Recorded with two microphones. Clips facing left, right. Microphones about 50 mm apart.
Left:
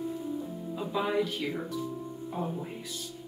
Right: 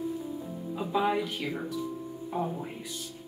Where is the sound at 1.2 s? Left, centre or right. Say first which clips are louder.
Even; centre.